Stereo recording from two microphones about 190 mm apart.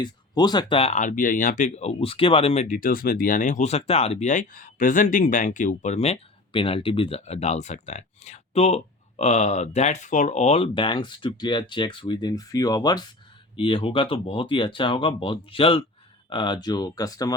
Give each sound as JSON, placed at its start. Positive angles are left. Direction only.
{"t": 0.0, "sound": "speech", "side_deg": 20}